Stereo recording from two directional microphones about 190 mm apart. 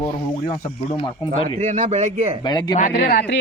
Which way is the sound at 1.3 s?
40° right (ahead or behind).